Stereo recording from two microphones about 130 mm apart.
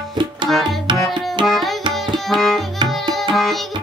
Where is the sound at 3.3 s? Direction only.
Centre (ahead or behind).